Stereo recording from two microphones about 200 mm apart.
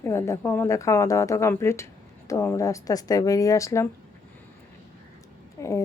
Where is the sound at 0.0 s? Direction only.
15° left (ahead or behind).